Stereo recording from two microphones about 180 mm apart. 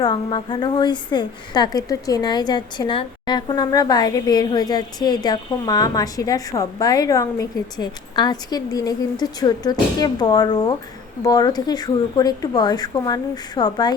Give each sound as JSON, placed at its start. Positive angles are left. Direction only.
{"t": 0.0, "sound": "a woman's voice", "side_deg": 25}